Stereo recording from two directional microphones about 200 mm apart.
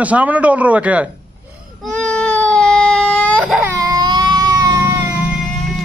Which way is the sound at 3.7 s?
15° right (ahead or behind).